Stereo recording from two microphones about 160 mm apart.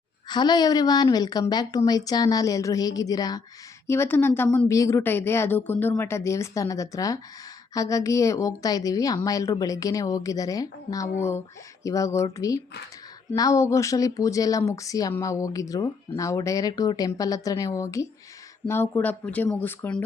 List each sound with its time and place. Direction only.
0.3 s a woman's voice: 25° left (ahead or behind); by 20.0 s 10° left (ahead or behind)